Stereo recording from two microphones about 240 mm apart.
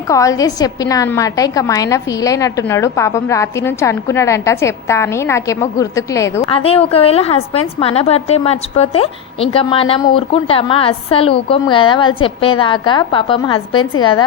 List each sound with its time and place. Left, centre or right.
0.1 s a woman's voice: centre
6.5 s a woman's voice: left